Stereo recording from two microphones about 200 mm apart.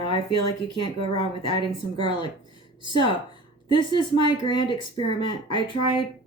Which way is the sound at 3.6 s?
25° left (ahead or behind).